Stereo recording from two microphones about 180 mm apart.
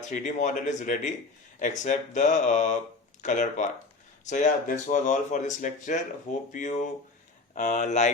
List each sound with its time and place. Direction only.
0.1 s speech: 45° left (ahead or behind)